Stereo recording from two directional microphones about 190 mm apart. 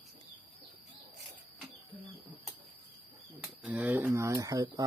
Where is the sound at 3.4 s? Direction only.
5° right (ahead or behind).